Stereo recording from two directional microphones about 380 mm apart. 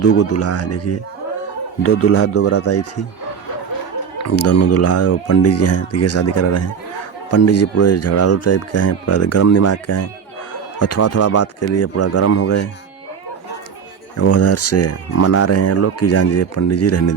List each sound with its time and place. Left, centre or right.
0.0 s speech: left
4.2 s speech: left
14.2 s speech: left